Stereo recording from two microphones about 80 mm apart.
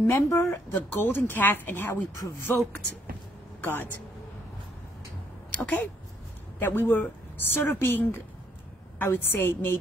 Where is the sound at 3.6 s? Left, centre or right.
Left.